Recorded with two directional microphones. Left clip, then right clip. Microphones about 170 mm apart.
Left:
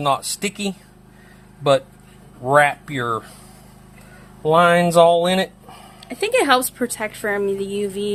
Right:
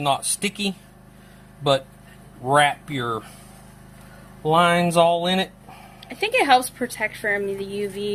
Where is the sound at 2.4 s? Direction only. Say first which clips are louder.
Left 3 dB; 25° left (ahead or behind).